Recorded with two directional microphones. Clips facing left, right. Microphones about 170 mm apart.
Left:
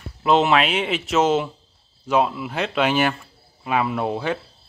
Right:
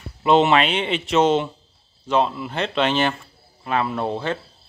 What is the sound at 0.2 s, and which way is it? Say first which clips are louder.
Speech: right 1 dB; centre (ahead or behind).